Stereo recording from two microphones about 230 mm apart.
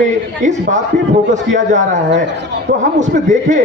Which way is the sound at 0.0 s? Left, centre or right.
Right.